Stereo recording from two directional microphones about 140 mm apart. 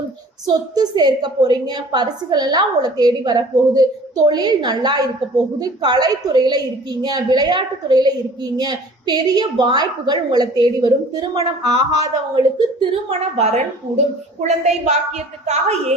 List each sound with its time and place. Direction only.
0.4 s a woman's voice: 30° right (ahead or behind); by 16.0 s 50° right (ahead or behind)